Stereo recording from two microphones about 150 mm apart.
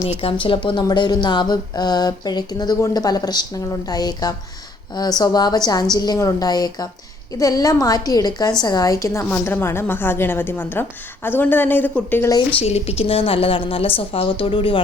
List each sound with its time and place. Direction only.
0.2 s a woman's voice: 35° left (ahead or behind); by 12.3 s 10° left (ahead or behind)
12.5 s a woman's voice: 45° left (ahead or behind)